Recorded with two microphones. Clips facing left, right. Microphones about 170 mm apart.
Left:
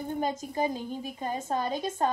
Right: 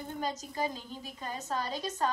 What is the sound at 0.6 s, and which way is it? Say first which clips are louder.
A woman's voice: left 5 dB; 50° left (ahead or behind).